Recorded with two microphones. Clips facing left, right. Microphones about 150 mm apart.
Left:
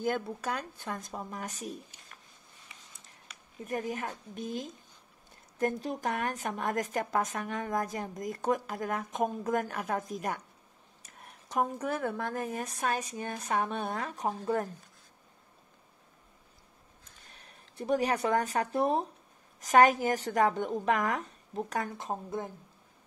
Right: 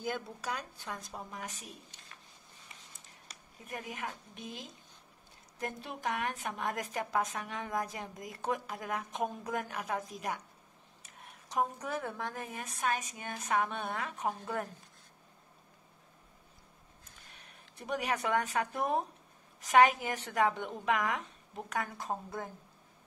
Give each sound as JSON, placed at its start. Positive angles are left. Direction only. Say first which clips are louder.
{"t": 0.0, "sound": "a woman's voice", "louder": "left 6 dB", "side_deg": 50}
{"t": 3.6, "sound": "a woman's voice", "louder": "left 7 dB", "side_deg": 40}
{"t": 17.5, "sound": "speech", "louder": "left 8 dB", "side_deg": 35}
{"t": 21.9, "sound": "a woman's voice", "louder": "left 3 dB", "side_deg": 20}